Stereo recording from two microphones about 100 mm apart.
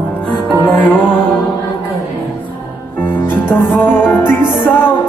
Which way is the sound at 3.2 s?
20° left (ahead or behind).